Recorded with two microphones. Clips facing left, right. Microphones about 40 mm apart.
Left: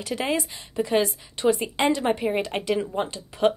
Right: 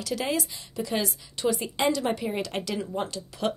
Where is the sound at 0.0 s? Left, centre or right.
Left.